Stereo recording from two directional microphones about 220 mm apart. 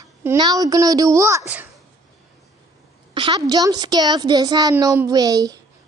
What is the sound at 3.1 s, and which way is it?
A woman's voice, 20° right (ahead or behind).